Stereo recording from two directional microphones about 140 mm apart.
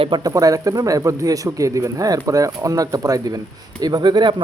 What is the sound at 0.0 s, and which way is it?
Speech, 30° right (ahead or behind).